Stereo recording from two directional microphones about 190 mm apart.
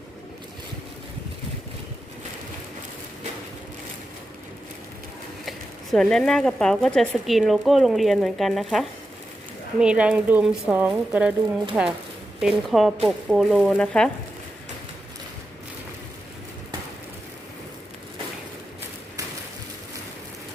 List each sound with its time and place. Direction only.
5.5 s speech: centre (ahead or behind)